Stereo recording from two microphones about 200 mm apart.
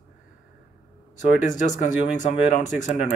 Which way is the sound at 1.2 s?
40° left (ahead or behind).